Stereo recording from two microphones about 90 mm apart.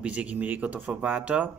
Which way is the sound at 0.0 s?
15° right (ahead or behind).